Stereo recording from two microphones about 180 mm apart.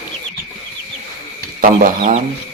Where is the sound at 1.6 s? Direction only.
45° right (ahead or behind).